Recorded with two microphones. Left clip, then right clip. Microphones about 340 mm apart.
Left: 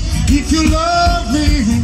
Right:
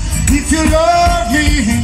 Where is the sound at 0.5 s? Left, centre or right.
Right.